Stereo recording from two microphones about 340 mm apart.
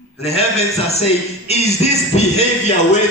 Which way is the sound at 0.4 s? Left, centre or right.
Centre.